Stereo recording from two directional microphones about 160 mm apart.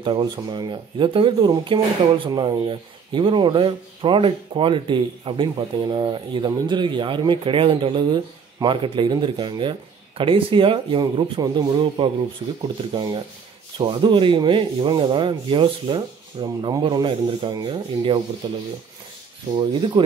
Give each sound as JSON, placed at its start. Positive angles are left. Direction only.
{"t": 0.0, "sound": "speech", "side_deg": -30}
{"t": 12.6, "sound": "rub", "side_deg": -30}